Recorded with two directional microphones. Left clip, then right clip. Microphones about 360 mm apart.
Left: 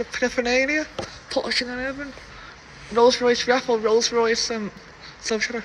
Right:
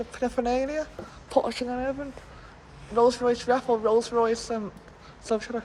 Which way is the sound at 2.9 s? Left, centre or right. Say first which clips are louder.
Left 5 dB; centre.